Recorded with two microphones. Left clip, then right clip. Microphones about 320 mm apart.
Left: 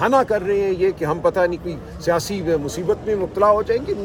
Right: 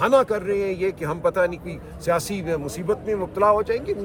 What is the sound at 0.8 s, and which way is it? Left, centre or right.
Speech, right.